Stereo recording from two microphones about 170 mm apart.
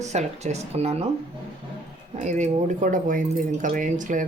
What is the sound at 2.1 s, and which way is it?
A woman's voice, 45° right (ahead or behind).